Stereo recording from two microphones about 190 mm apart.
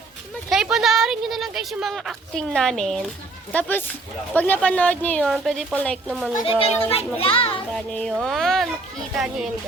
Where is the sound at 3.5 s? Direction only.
10° left (ahead or behind).